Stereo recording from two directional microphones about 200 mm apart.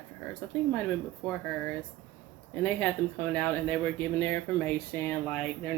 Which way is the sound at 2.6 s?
10° left (ahead or behind).